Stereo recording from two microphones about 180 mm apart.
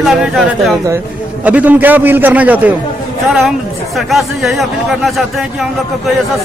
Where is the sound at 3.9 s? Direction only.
Centre (ahead or behind).